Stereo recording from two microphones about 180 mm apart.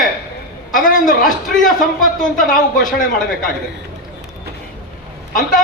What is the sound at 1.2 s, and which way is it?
A man's voice, centre (ahead or behind).